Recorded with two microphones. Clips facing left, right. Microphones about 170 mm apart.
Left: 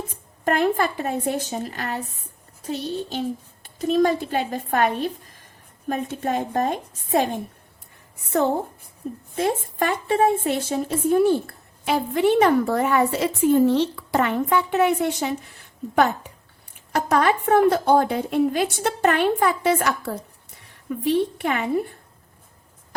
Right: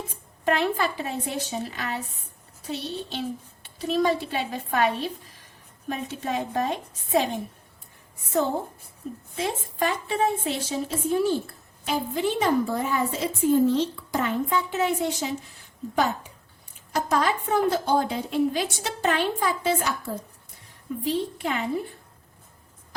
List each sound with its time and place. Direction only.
0.4 s a woman's voice: 50° left (ahead or behind)
9.3 s a woman's voice: 50° left (ahead or behind)
16.9 s a woman's voice: 60° left (ahead or behind)